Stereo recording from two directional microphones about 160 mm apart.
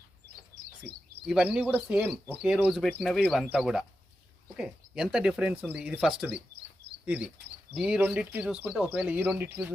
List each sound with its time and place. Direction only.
0.5 s bird: 25° right (ahead or behind)
1.3 s speech: 5° right (ahead or behind)